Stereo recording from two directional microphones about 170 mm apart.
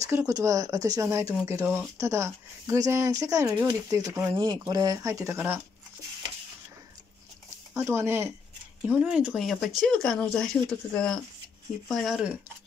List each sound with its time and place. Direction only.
0.0 s speech: 20° right (ahead or behind)
7.7 s speech: 15° right (ahead or behind)